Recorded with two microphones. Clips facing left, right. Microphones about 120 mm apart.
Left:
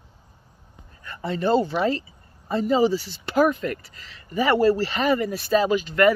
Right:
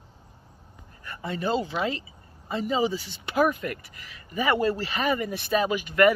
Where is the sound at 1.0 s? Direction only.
5° right (ahead or behind).